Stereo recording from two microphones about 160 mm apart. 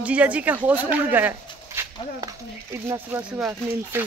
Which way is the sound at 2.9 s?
10° right (ahead or behind).